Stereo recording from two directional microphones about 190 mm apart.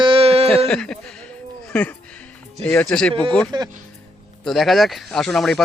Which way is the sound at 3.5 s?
25° right (ahead or behind).